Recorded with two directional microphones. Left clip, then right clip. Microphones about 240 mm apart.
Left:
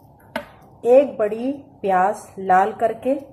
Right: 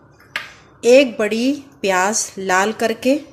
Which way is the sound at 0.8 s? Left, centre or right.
Right.